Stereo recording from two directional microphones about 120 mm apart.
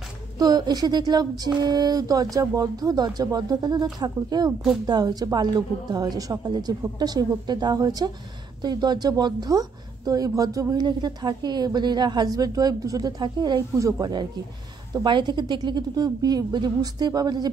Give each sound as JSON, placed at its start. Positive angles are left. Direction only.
{"t": 0.4, "sound": "speech", "side_deg": -35}